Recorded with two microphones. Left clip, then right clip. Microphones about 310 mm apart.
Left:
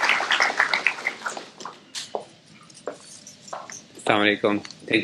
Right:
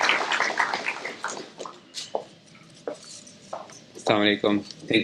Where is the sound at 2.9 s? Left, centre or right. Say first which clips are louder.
Even; left.